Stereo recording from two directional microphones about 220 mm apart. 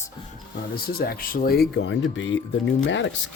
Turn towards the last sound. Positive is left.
turn(degrees=60)  # may be behind; listen again after turning